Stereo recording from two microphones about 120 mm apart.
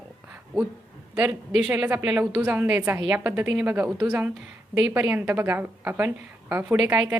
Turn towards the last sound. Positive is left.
turn(degrees=-10)  # may be behind; listen again after turning